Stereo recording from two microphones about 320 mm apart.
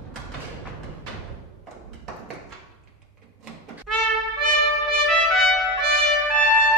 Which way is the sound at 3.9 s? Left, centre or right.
Right.